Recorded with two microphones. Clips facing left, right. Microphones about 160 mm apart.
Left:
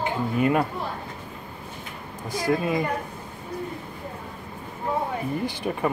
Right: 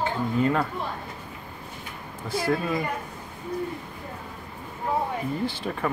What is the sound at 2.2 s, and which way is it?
Speech, 15° left (ahead or behind).